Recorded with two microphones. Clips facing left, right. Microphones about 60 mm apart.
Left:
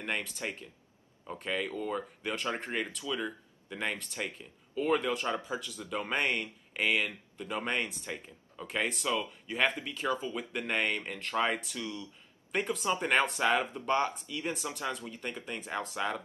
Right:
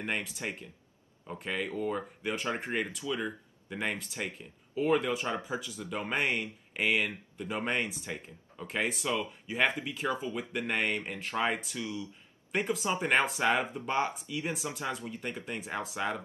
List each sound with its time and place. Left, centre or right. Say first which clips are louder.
0.0 s speech: right 1 dB; centre
5.2 s speech: even; centre
5.9 s speech: even; centre
9.9 s speech: even; right
10.3 s speech: right 1 dB; centre
13.4 s speech: even; centre